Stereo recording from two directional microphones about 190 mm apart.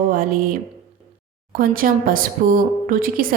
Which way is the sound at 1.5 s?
50° right (ahead or behind).